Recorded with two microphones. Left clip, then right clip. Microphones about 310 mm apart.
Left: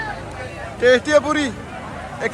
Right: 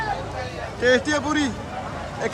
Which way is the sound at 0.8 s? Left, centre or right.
Centre.